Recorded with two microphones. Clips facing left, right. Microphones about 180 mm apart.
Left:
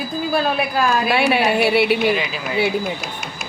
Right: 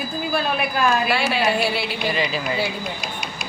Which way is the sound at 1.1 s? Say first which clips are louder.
Left 4 dB; 60° left (ahead or behind).